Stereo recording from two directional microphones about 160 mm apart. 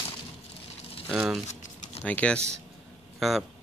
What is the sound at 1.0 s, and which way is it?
Speech, 5° right (ahead or behind).